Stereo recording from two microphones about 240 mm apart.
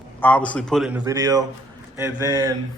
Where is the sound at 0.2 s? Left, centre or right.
Centre.